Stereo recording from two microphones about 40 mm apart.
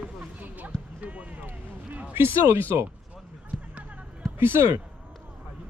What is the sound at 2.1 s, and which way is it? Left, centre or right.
Speech, right.